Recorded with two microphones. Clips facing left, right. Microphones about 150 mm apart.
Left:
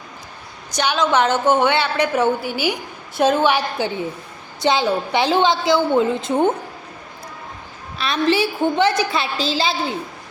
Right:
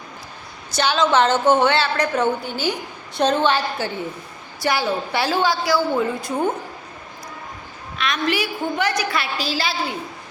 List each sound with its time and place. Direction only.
0.7 s a woman's voice: 15° left (ahead or behind)
7.9 s a woman's voice: 30° left (ahead or behind)